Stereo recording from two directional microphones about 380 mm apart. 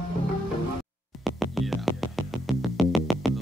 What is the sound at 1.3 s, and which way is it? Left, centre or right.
Music, centre.